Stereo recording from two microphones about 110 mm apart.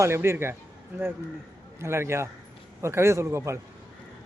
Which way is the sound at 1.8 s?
25° right (ahead or behind).